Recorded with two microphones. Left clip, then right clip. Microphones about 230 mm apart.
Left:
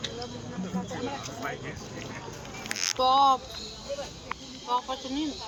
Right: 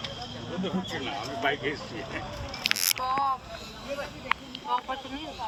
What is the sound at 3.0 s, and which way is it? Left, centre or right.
Speech, left.